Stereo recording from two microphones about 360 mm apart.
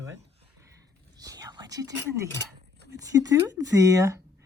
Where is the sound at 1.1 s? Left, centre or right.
Centre.